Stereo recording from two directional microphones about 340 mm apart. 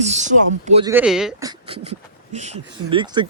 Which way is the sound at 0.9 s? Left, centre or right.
Centre.